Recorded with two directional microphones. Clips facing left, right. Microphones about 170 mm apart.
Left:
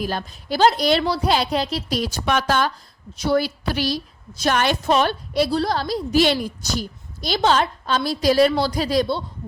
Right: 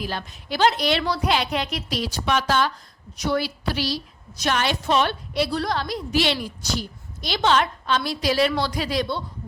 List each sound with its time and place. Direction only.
0.0 s a woman's voice: 45° left (ahead or behind)
2.0 s a woman's voice: 45° left (ahead or behind)